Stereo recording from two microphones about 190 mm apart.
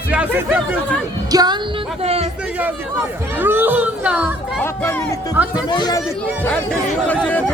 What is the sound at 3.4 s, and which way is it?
Speech, 10° right (ahead or behind).